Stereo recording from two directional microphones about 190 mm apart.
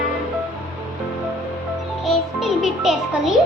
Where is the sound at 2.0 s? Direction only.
Centre (ahead or behind).